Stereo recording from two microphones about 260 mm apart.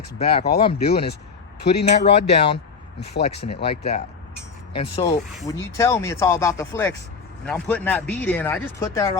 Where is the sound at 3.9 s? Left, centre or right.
Left.